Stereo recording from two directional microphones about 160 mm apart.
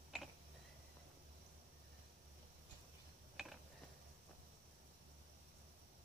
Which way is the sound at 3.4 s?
5° right (ahead or behind).